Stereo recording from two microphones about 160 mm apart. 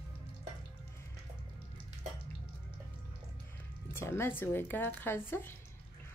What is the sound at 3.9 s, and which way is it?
Speech, 15° left (ahead or behind).